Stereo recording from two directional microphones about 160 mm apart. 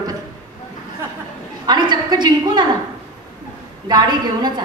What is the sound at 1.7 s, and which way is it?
A woman's voice, 25° right (ahead or behind).